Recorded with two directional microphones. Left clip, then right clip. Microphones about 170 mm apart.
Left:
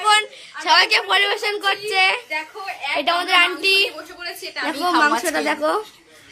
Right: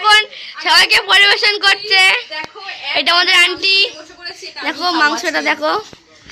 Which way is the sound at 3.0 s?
Centre (ahead or behind).